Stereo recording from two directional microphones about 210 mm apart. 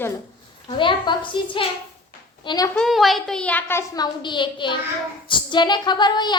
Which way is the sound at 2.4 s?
15° left (ahead or behind).